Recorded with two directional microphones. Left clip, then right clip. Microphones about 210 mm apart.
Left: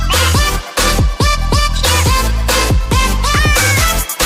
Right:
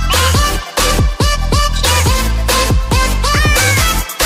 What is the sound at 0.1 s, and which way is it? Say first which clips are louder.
Music: even; centre (ahead or behind).